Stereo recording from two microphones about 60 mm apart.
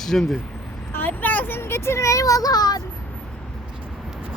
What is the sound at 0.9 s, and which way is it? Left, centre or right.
Speech, left.